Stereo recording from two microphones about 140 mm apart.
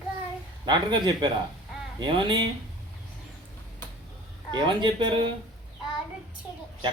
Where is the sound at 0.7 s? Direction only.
30° right (ahead or behind).